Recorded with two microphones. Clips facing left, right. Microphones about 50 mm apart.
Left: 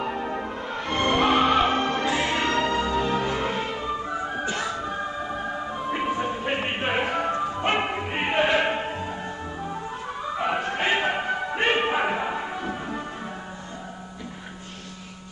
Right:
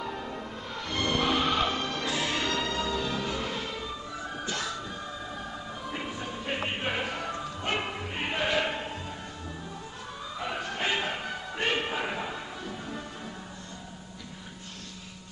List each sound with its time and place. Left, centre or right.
0.0 s music: left
10.3 s music: left